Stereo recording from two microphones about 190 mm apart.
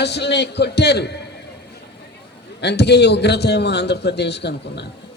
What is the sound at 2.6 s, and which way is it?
A man's voice, 60° left (ahead or behind).